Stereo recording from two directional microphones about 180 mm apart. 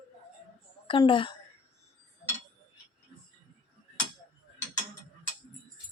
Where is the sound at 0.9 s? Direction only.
30° left (ahead or behind).